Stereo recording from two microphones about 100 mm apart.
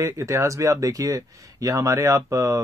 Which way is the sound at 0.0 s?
30° right (ahead or behind).